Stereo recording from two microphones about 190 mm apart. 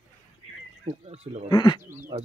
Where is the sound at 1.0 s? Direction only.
35° right (ahead or behind).